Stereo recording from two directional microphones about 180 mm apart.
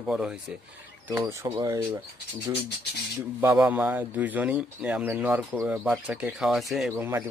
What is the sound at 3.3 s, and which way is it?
Speech, 10° right (ahead or behind).